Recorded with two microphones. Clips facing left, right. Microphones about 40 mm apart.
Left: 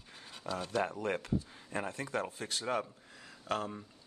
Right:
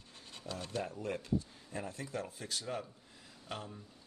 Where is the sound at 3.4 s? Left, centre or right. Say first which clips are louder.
Left 9 dB; left.